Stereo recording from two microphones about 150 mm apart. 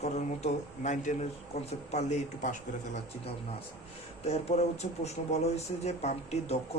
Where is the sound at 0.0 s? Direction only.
50° left (ahead or behind).